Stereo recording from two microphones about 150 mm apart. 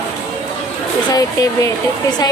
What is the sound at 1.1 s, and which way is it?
Speech, 25° left (ahead or behind).